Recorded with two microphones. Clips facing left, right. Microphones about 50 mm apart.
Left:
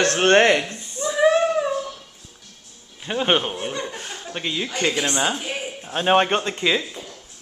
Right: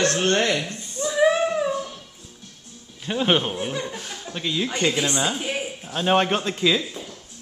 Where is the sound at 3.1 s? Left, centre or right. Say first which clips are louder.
Left 1 dB; centre.